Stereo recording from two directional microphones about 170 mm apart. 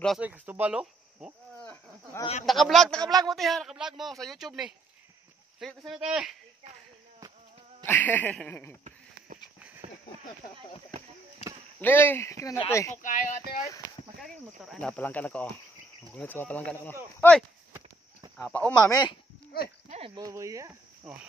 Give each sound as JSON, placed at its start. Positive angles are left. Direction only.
{"t": 0.2, "sound": "speech", "side_deg": -10}
{"t": 1.6, "sound": "a sound", "side_deg": 10}
{"t": 2.4, "sound": "speech", "side_deg": 0}
{"t": 3.0, "sound": "speech", "side_deg": -20}
{"t": 3.3, "sound": "speech", "side_deg": 0}
{"t": 7.8, "sound": "speech", "side_deg": 10}
{"t": 9.8, "sound": "a sound", "side_deg": -40}
{"t": 11.8, "sound": "speech", "side_deg": 10}
{"t": 13.0, "sound": "speech", "side_deg": 50}
{"t": 14.6, "sound": "speech", "side_deg": 0}
{"t": 18.8, "sound": "speech", "side_deg": 20}
{"t": 20.2, "sound": "speech", "side_deg": -20}
{"t": 21.0, "sound": "cricket", "side_deg": -5}